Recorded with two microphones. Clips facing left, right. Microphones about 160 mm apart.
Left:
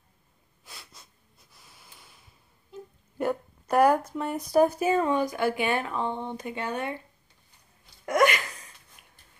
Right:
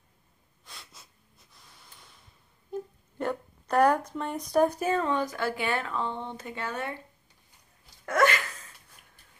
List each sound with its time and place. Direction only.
0.7 s wheeze: 5° left (ahead or behind)
1.5 s a sound: 5° left (ahead or behind)
2.7 s music: 50° right (ahead or behind)
3.2 s speech: 10° left (ahead or behind)
8.0 s a sound: 15° left (ahead or behind)
9.0 s mechanisms: 40° right (ahead or behind)